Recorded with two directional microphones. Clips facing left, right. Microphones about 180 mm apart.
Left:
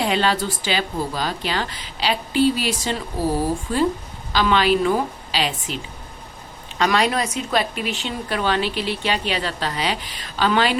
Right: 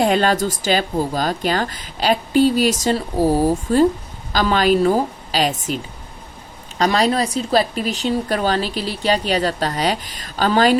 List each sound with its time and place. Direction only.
0.0 s a woman's voice: 45° right (ahead or behind)